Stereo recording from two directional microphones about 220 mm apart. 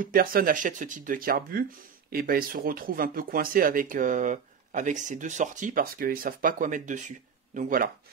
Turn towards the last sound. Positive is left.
turn(degrees=-40)  # may be behind; listen again after turning